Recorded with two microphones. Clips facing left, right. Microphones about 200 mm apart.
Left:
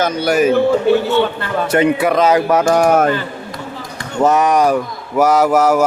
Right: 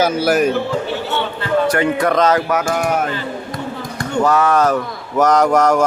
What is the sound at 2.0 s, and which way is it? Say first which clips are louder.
Speech: left 2 dB; 5° left (ahead or behind).